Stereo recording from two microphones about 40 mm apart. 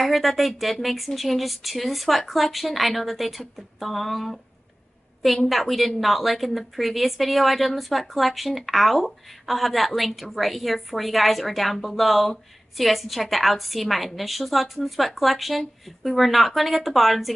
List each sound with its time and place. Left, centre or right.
0.0 s a woman's voice: centre
5.5 s a woman's voice: centre